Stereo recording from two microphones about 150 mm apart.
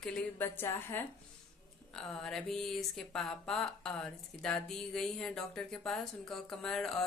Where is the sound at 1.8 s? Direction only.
5° left (ahead or behind).